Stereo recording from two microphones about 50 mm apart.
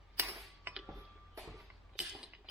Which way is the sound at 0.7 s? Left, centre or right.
Right.